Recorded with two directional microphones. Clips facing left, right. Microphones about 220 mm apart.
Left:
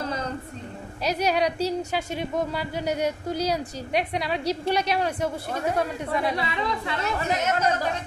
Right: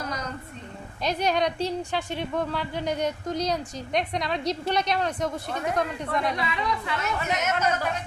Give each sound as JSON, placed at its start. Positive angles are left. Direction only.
{"t": 1.0, "sound": "speech", "side_deg": 10}
{"t": 6.3, "sound": "speech", "side_deg": 30}